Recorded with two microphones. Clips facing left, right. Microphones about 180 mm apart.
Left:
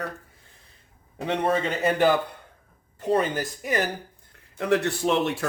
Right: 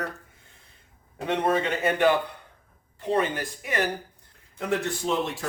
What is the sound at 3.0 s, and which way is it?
Speech, 40° left (ahead or behind).